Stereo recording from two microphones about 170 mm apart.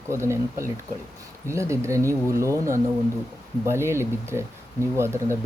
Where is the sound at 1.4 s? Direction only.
15° right (ahead or behind).